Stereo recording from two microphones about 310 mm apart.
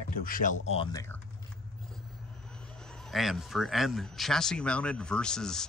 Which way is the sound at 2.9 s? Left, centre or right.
Centre.